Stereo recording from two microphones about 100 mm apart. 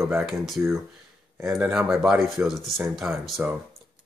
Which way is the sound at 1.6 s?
5° right (ahead or behind).